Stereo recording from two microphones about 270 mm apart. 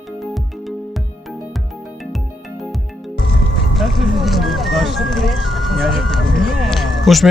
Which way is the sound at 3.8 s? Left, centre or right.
Centre.